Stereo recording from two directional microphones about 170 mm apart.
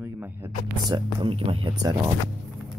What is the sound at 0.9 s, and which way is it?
Speech, 30° right (ahead or behind).